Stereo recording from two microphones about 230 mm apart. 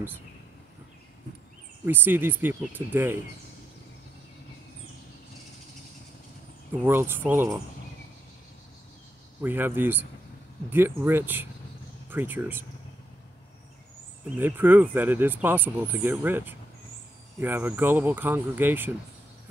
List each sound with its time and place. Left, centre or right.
1.9 s speech: centre
6.7 s speech: centre
9.4 s speech: centre
14.4 s speech: centre